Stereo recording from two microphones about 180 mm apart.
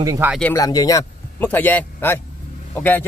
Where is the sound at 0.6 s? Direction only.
20° left (ahead or behind).